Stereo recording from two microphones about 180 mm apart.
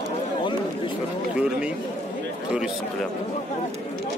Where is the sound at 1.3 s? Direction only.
5° right (ahead or behind).